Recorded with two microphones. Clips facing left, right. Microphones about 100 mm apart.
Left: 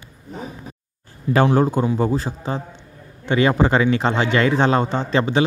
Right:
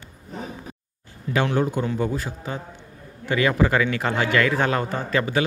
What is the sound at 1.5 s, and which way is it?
A man's voice, 35° left (ahead or behind).